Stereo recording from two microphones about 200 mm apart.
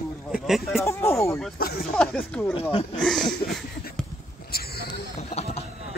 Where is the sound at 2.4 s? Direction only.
10° left (ahead or behind).